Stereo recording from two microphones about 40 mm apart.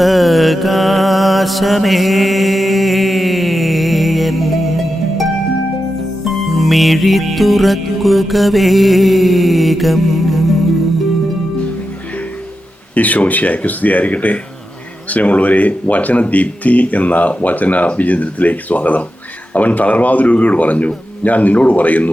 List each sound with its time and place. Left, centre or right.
0.0 s mantra: centre
6.2 s music: centre
12.9 s speech: left